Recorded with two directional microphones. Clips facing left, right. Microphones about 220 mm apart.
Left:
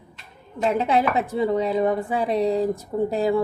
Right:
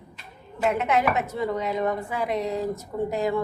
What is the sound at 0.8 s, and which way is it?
Speech, 30° left (ahead or behind).